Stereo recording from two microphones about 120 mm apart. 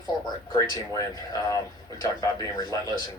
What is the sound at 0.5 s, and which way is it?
Speech, 30° left (ahead or behind).